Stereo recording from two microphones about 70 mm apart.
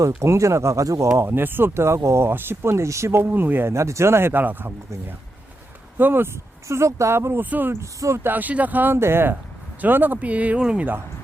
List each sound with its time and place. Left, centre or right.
0.2 s speech: right
1.1 s speech: right
6.0 s speech: right
6.7 s speech: right
7.8 s speech: right
8.2 s speech: right